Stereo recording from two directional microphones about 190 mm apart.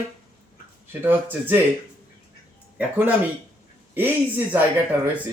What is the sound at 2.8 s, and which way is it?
Speech, 10° right (ahead or behind).